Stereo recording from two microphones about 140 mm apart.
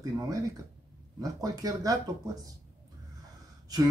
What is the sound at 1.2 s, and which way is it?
Speech, 25° right (ahead or behind).